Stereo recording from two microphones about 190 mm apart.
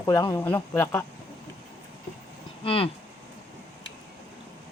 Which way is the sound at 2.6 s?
30° left (ahead or behind).